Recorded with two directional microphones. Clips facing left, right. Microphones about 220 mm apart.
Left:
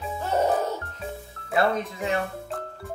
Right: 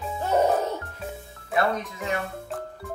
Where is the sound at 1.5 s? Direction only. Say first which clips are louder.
Left 1 dB; 30° left (ahead or behind).